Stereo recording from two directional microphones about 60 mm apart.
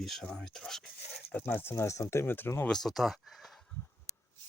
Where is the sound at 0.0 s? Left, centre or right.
Centre.